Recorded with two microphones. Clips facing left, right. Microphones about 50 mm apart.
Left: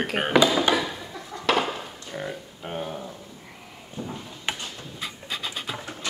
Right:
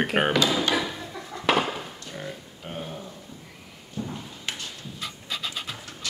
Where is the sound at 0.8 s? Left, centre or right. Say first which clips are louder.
Even; centre.